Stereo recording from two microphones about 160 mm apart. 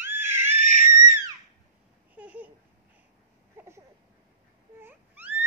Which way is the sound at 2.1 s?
10° right (ahead or behind).